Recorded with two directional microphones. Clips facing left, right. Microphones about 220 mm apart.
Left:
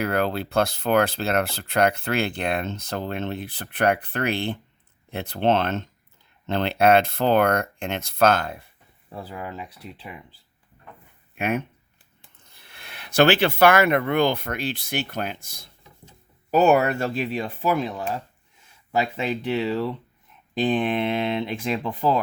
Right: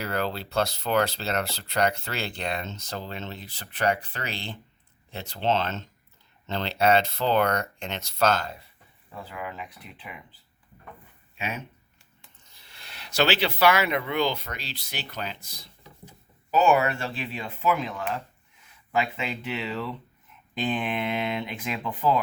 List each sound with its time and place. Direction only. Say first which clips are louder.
0.0 s speech: left 6 dB; 55° left (ahead or behind)
9.1 s speech: left 3 dB; 35° left (ahead or behind)
11.3 s speech: left 9 dB; 55° left (ahead or behind); by 21.9 s 30° left (ahead or behind)